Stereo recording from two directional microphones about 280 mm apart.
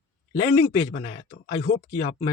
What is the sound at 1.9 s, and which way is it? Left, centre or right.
Speech, left.